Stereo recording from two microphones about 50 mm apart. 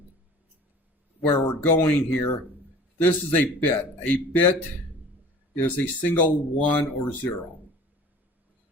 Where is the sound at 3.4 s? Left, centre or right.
Left.